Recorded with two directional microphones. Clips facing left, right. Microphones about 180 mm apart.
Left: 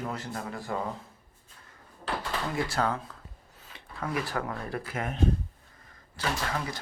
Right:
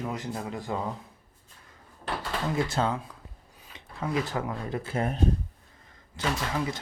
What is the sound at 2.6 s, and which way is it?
Speech, 20° right (ahead or behind).